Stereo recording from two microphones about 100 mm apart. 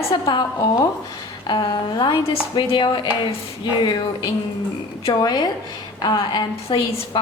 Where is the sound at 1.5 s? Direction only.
55° left (ahead or behind).